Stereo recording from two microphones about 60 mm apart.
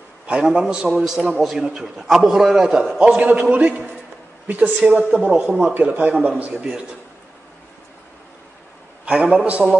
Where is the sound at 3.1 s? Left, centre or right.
Right.